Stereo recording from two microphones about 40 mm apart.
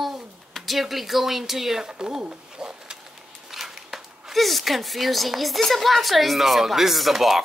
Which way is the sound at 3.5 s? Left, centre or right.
Centre.